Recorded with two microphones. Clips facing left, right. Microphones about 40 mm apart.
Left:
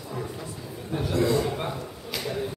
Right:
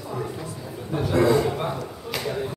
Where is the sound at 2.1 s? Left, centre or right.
Centre.